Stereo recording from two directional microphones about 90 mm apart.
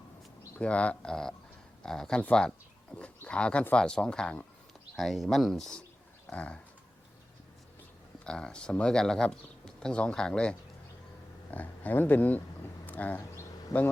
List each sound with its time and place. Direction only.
0.6 s speech: 15° left (ahead or behind)
6.3 s speech: 15° left (ahead or behind)
8.2 s speech: 10° left (ahead or behind)
12.8 s a sound: 20° left (ahead or behind)
13.7 s speech: 35° left (ahead or behind)